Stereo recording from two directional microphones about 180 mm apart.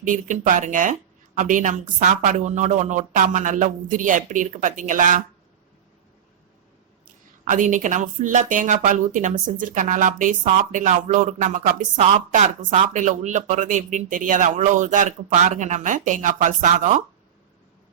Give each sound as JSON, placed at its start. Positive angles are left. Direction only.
{"t": 0.0, "sound": "speech", "side_deg": -45}
{"t": 7.4, "sound": "speech", "side_deg": -45}